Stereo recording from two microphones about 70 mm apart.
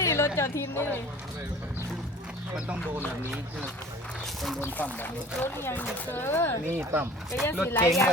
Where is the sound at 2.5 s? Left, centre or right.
Centre.